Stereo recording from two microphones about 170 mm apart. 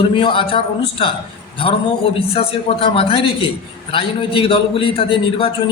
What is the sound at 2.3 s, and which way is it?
A man's voice, 35° left (ahead or behind).